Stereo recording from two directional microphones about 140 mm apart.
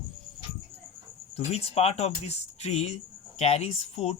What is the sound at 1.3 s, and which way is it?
Speech, 45° left (ahead or behind).